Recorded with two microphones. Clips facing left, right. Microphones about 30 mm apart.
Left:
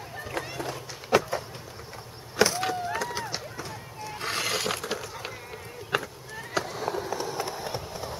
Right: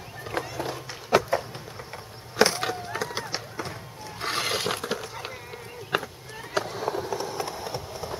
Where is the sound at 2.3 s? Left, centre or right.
Right.